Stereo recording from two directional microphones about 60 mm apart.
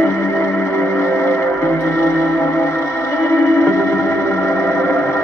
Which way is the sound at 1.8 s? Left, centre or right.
Left.